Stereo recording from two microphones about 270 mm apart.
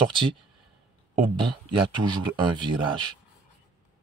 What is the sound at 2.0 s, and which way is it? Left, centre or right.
Speech, centre.